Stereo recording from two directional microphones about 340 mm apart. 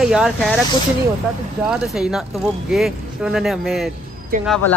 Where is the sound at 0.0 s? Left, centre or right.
Centre.